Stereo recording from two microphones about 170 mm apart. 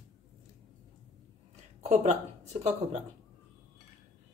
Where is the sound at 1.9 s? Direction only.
40° right (ahead or behind).